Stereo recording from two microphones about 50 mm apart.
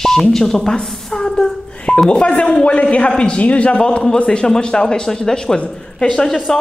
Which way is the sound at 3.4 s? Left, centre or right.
Left.